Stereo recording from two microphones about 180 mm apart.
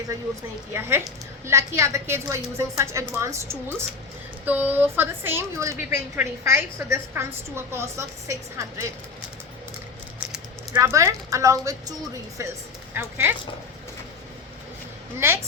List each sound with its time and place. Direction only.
0.7 s a woman's voice: 15° right (ahead or behind)
10.8 s a woman's voice: 15° right (ahead or behind)